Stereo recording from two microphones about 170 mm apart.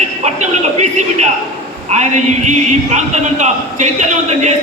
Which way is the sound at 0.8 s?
40° right (ahead or behind).